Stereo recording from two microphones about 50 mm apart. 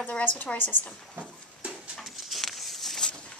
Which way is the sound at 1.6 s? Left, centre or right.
Right.